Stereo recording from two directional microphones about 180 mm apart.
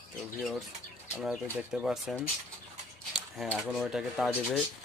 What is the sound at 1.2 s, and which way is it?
Speech, 5° right (ahead or behind).